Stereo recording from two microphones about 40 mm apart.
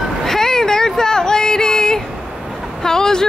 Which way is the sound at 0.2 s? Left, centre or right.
Centre.